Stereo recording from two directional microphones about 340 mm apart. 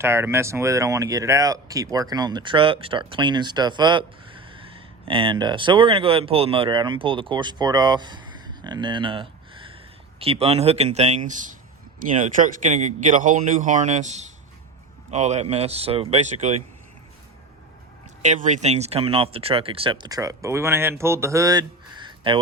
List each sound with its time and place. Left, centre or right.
0.0 s speech: centre
18.2 s speech: right